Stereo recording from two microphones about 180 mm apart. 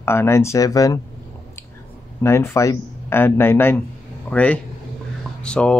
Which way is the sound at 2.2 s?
15° left (ahead or behind).